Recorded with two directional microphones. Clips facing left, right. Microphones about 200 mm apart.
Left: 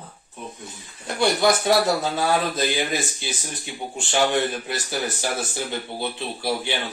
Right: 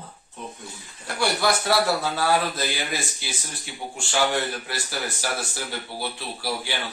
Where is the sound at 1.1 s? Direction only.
20° left (ahead or behind).